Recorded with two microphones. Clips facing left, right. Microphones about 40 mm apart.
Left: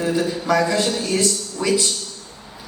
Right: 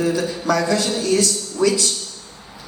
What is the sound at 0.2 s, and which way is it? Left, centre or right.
A man's voice, left.